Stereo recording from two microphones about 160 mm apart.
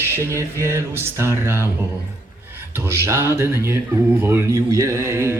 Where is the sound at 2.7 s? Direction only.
15° right (ahead or behind).